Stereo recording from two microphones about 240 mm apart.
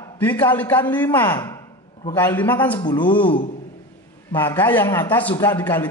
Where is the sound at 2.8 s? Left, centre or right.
Centre.